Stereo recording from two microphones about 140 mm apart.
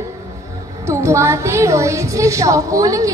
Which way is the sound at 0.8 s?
20° right (ahead or behind).